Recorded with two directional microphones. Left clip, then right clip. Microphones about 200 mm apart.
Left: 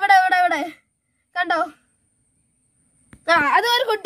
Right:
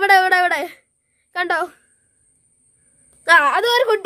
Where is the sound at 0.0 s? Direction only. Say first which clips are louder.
Right 1 dB; centre (ahead or behind).